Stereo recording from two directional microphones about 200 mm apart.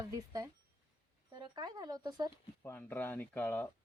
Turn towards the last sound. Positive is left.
turn(degrees=10)  # may be behind; listen again after turning